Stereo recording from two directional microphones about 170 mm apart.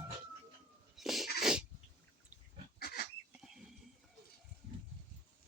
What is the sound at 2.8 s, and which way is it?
Livestock, 65° left (ahead or behind).